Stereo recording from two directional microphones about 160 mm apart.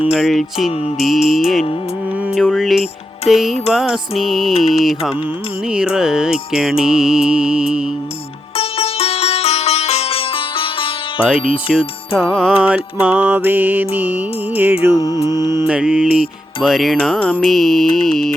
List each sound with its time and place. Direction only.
0.0 s music: 5° right (ahead or behind)
8.5 s sitar: 40° left (ahead or behind)
11.7 s music: 5° right (ahead or behind)
15.0 s mantra: 25° left (ahead or behind)
15.6 s music: 5° right (ahead or behind)